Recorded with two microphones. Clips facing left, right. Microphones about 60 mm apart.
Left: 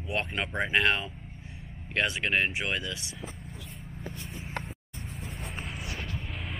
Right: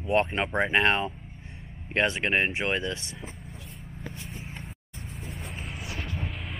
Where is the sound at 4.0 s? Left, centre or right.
Centre.